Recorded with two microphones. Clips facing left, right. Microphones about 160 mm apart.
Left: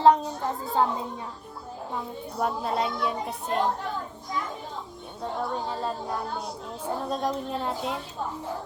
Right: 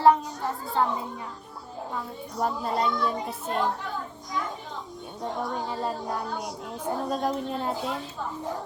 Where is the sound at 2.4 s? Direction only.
5° left (ahead or behind).